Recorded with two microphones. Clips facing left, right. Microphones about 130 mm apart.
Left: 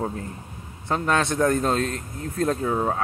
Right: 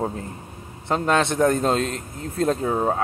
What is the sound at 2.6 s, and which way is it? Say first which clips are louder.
Speech: right 2 dB; 35° right (ahead or behind).